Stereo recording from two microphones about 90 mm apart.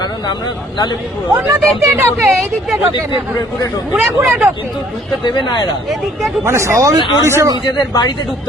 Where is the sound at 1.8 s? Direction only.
35° right (ahead or behind).